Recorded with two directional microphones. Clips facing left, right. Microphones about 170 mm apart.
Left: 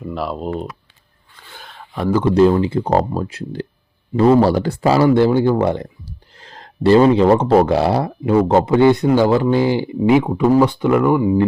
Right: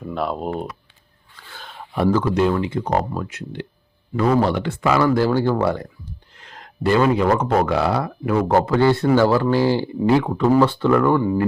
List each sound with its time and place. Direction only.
0.1 s speech: centre (ahead or behind)
1.6 s a sound: centre (ahead or behind)
2.2 s speech: 30° left (ahead or behind)
6.3 s speech: 35° left (ahead or behind); by 11.3 s 10° left (ahead or behind)